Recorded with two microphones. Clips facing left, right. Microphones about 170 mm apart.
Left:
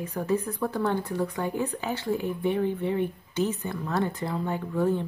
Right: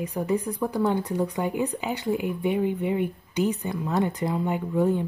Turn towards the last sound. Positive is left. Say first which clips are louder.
# right 2 dB
turn(degrees=-15)  # may be behind; listen again after turning